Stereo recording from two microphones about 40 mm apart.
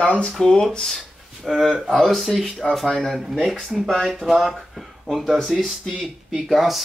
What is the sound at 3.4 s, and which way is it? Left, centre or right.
Speech, centre.